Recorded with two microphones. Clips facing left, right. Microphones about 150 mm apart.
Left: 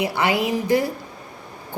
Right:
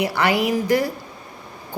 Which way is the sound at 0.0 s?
20° left (ahead or behind).